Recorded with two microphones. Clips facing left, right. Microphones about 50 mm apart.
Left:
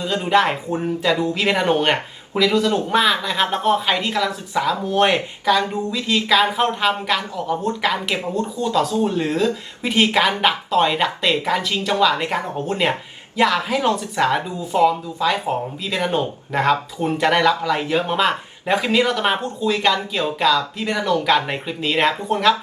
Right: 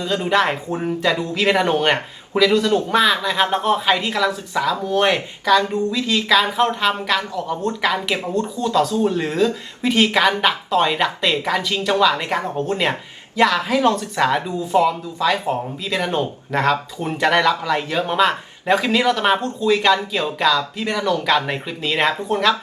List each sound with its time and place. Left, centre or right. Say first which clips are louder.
0.0 s speech: left 1 dB; centre
4.5 s speech: left 4 dB; centre
17.7 s speech: right 1 dB; centre